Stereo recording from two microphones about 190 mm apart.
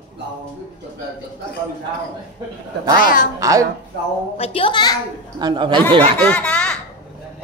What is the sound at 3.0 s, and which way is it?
Speech, 45° left (ahead or behind).